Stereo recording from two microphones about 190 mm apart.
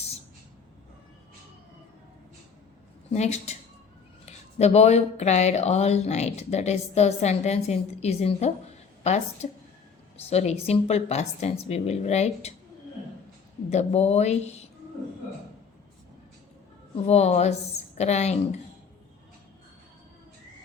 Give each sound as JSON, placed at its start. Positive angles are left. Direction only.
{"t": 3.1, "sound": "speech", "side_deg": 35}
{"t": 13.7, "sound": "speech", "side_deg": 35}
{"t": 16.9, "sound": "a woman's voice", "side_deg": 35}